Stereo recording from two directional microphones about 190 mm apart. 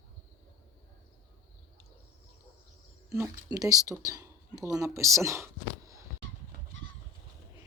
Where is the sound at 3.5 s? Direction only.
20° right (ahead or behind).